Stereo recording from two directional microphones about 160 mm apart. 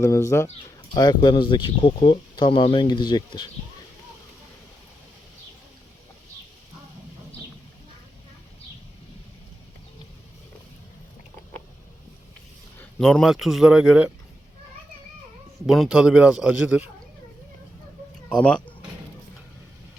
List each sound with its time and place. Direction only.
0.0 s speech: 20° left (ahead or behind)
0.9 s speech: 25° left (ahead or behind)
12.8 s a man's voice: centre (ahead or behind)
15.6 s a man's voice: centre (ahead or behind)
18.3 s speech: 5° left (ahead or behind)